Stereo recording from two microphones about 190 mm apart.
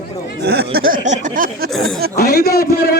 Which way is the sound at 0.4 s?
55° right (ahead or behind).